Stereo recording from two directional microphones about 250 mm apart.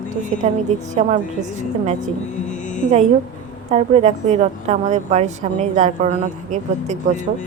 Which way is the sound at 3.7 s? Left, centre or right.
Right.